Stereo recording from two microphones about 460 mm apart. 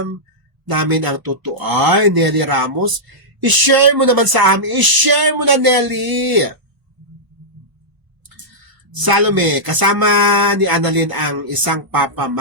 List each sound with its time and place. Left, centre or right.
0.7 s speech: right
8.9 s speech: right